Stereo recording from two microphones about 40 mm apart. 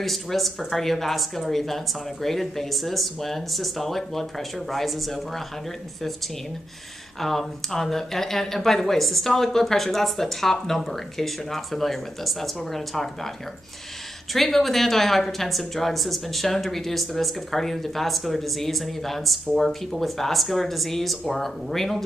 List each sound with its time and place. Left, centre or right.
0.0 s speech: centre
7.2 s speech: centre
14.3 s speech: centre